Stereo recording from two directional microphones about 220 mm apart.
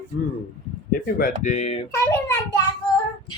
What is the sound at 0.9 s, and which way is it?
Speech, 40° left (ahead or behind).